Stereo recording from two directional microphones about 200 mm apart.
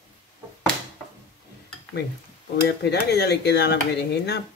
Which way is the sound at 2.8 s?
55° left (ahead or behind).